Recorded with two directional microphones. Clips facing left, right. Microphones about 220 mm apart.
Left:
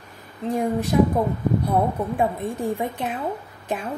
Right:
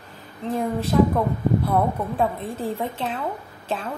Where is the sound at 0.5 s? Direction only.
15° left (ahead or behind).